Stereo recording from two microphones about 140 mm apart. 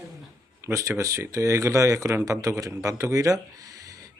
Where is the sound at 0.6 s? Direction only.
20° right (ahead or behind).